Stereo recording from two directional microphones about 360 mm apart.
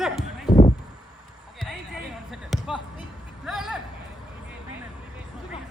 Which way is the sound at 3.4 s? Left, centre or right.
Centre.